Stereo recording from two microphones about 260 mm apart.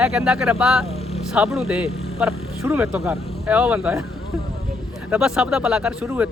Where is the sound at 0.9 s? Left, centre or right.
Left.